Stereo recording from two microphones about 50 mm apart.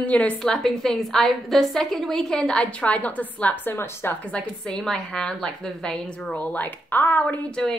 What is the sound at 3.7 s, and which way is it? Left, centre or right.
Speech, left.